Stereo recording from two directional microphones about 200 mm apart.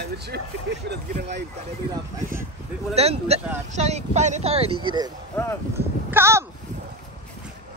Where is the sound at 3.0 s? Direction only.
30° right (ahead or behind).